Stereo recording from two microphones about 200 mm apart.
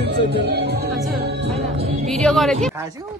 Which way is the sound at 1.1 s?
55° right (ahead or behind).